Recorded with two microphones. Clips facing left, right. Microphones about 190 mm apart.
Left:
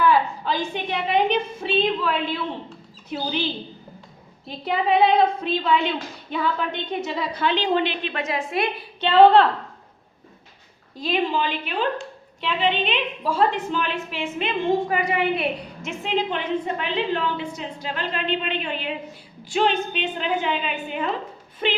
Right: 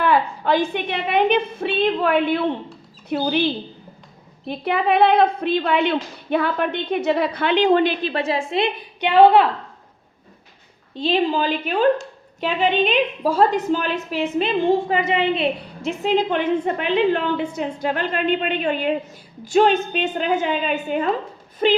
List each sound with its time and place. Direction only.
0.0 s a woman's voice: 60° right (ahead or behind)
4.4 s a woman's voice: 60° right (ahead or behind); by 9.5 s 10° right (ahead or behind)
10.9 s a woman's voice: 30° right (ahead or behind)
15.8 s a woman's voice: 40° right (ahead or behind)